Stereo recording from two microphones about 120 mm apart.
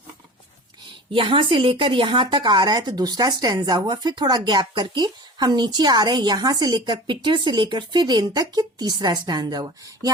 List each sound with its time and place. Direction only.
1.1 s speech: 45° right (ahead or behind)